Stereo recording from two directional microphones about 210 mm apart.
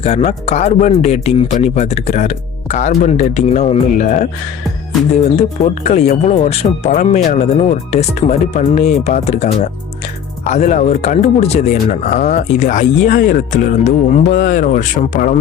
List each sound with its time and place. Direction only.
0.0 s speech: 30° left (ahead or behind)
5.4 s speech: 35° left (ahead or behind)